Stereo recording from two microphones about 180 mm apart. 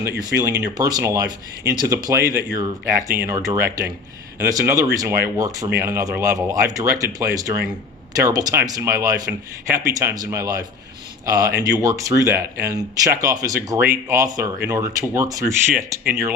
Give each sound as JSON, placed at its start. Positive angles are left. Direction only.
{"t": 0.0, "sound": "speech", "side_deg": -15}